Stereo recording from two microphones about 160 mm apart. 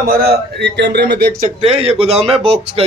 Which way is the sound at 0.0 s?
65° right (ahead or behind).